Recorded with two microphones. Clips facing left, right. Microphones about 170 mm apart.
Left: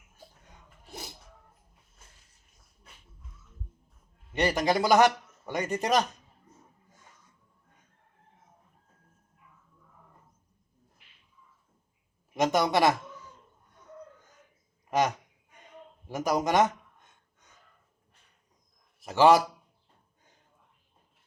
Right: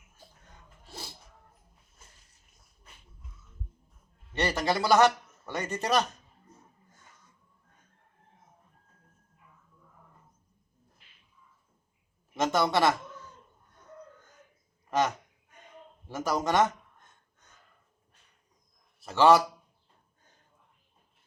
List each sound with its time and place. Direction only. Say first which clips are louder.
0.9 s music: left 2 dB; 20° left (ahead or behind)
4.3 s a man's voice: left 3 dB; 15° left (ahead or behind)
12.3 s a woman's voice: left 1 dB; 15° left (ahead or behind)
14.8 s a sound: left 1 dB; 15° left (ahead or behind)
16.0 s a man's voice: left 2 dB; 15° left (ahead or behind)
18.9 s a man's voice: left 1 dB; 15° left (ahead or behind)